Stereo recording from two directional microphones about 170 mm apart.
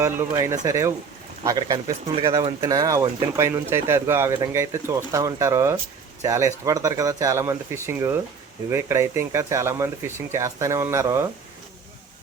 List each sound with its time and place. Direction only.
0.0 s speech: 15° right (ahead or behind)